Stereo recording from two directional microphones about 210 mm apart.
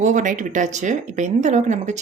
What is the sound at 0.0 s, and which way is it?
Speech, 35° right (ahead or behind).